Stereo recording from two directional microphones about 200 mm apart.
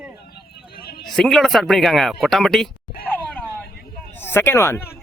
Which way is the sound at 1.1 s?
Centre (ahead or behind).